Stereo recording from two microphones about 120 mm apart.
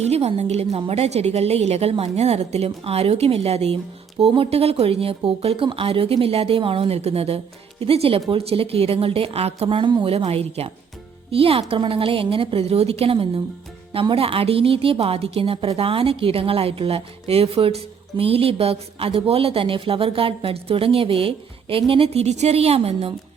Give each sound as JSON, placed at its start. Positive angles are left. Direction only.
{"t": 0.0, "sound": "a woman's voice", "side_deg": -60}